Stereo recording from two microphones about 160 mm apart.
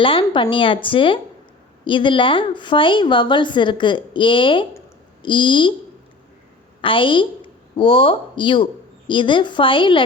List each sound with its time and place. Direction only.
0.0 s a woman's voice: 30° left (ahead or behind)
6.8 s a woman's voice: 30° left (ahead or behind)